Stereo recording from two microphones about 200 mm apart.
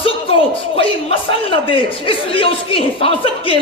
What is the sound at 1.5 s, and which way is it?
Speech, 25° left (ahead or behind).